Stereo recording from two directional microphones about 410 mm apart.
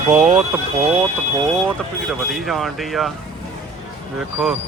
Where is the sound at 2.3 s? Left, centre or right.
Centre.